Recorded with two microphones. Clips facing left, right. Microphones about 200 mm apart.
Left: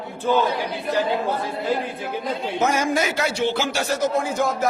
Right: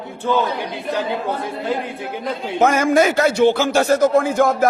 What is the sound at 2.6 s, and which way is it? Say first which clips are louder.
Speech: right 7 dB; 55° right (ahead or behind).